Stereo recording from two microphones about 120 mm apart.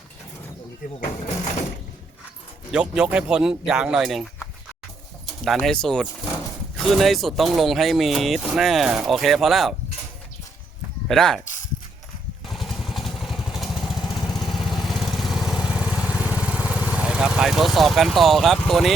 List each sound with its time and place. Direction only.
2.7 s speech: 5° right (ahead or behind)
5.5 s speech: 5° left (ahead or behind)
11.1 s speech: 5° left (ahead or behind)
12.5 s vehicle: centre (ahead or behind)
14.3 s lawn mower: 35° left (ahead or behind)
14.7 s vehicle: centre (ahead or behind)
18.7 s speech: centre (ahead or behind)